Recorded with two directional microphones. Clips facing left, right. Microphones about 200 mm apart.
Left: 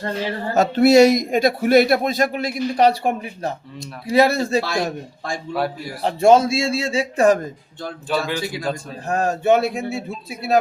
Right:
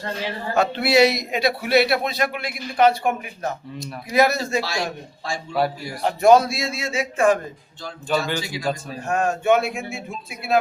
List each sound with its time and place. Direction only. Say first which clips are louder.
0.5 s speech: left 6 dB; 45° left (ahead or behind)
4.6 s speech: left 4 dB; 55° left (ahead or behind)
6.0 s speech: left 1 dB; 30° left (ahead or behind)
8.1 s a man's voice: even; centre (ahead or behind)
9.0 s speech: left 2 dB; 35° left (ahead or behind)